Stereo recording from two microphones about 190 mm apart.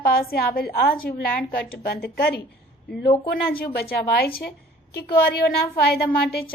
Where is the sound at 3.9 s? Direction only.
55° left (ahead or behind).